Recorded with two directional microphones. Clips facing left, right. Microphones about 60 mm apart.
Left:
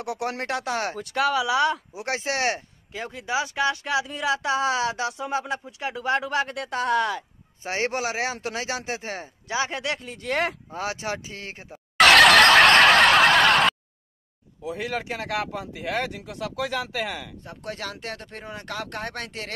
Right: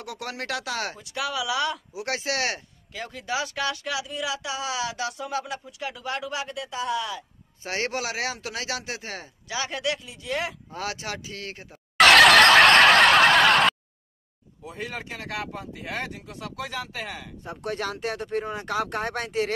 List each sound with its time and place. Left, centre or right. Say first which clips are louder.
0.0 s speech: left 5 dB; left
7.6 s speech: left 2 dB; left
10.7 s speech: left 3 dB; left
12.0 s fowl: even; centre
14.6 s speech: left 5 dB; left
17.4 s speech: right 4 dB; centre